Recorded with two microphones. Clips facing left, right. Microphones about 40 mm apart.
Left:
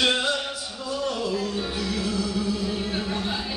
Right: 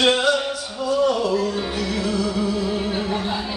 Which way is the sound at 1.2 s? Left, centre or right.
Right.